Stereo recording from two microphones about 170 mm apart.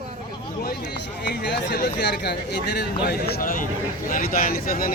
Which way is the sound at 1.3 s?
75° left (ahead or behind).